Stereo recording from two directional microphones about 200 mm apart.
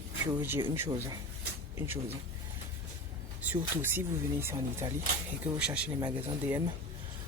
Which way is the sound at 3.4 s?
10° right (ahead or behind).